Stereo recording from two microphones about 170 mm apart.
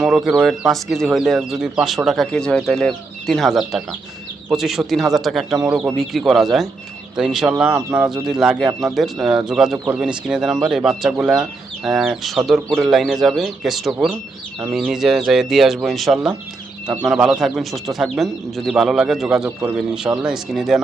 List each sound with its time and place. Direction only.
0.0 s speech: centre (ahead or behind)
9.7 s speech: 20° right (ahead or behind)
10.0 s speech: 5° right (ahead or behind)